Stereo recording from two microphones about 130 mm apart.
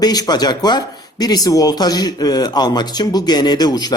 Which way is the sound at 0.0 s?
30° left (ahead or behind).